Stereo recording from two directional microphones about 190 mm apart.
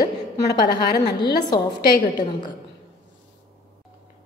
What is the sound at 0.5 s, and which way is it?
Speech, 60° left (ahead or behind).